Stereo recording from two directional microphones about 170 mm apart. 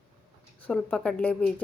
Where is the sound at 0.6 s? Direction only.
5° left (ahead or behind).